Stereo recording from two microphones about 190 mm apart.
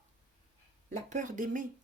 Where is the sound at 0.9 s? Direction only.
40° right (ahead or behind).